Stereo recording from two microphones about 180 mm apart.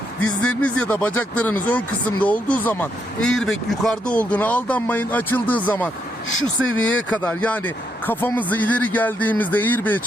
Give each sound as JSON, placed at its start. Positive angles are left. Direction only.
{"t": 0.4, "sound": "speech", "side_deg": 5}
{"t": 6.6, "sound": "speech", "side_deg": 90}
{"t": 7.1, "sound": "speech", "side_deg": 5}